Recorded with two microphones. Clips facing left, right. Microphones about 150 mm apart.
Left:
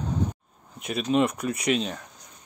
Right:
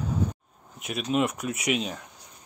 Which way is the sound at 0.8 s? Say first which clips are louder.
Left 3 dB; 5° right (ahead or behind).